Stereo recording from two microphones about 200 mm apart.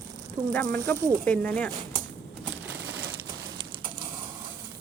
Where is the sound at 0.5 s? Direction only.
10° left (ahead or behind).